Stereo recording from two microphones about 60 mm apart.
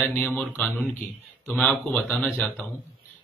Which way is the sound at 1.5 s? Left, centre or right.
Centre.